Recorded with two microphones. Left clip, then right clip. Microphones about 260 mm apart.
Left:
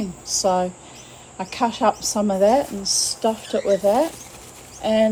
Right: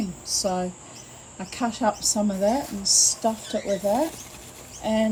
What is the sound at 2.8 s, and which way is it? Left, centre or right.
Speech, left.